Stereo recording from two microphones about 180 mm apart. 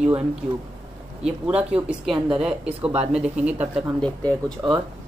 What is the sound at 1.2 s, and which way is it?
Speech, 5° right (ahead or behind).